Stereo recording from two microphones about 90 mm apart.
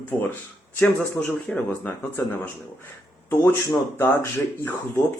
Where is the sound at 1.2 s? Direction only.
10° left (ahead or behind).